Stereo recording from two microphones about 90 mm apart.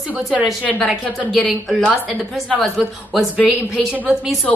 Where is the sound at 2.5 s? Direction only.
15° left (ahead or behind).